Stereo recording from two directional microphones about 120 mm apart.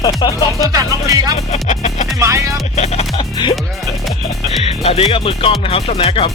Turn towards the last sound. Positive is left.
turn(degrees=50)  # may be behind; listen again after turning